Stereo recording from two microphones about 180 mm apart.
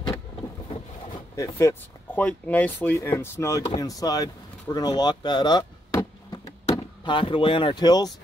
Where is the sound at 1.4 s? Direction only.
15° left (ahead or behind).